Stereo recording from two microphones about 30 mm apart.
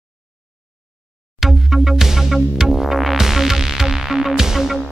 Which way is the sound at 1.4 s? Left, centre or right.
Centre.